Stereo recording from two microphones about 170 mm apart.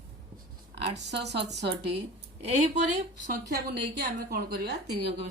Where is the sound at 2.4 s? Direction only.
40° right (ahead or behind).